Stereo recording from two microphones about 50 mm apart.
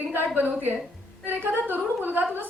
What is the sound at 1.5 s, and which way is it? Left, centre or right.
Speech, right.